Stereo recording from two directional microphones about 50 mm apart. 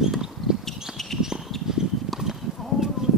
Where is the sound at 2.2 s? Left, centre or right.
Centre.